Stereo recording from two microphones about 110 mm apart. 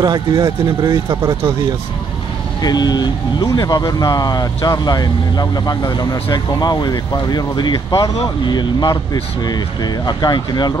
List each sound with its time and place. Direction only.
0.0 s speech: 40° right (ahead or behind)
2.6 s speech: 35° left (ahead or behind)